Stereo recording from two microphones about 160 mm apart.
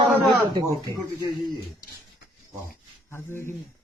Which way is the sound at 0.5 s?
25° right (ahead or behind).